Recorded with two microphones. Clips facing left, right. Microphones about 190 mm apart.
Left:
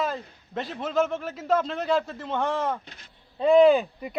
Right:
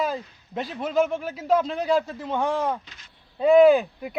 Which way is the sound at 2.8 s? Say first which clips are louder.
Left 3 dB; 60° left (ahead or behind).